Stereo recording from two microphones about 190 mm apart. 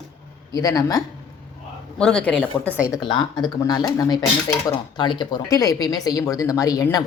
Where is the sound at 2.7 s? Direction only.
5° right (ahead or behind).